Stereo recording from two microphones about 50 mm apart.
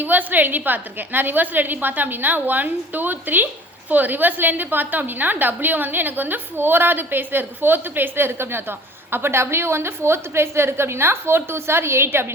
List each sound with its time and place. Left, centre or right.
0.0 s a woman's voice: right